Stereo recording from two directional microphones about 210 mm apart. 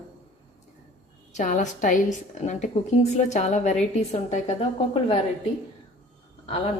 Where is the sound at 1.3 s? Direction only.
35° left (ahead or behind).